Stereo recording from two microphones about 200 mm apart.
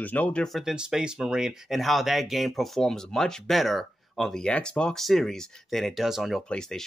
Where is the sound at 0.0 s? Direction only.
10° left (ahead or behind).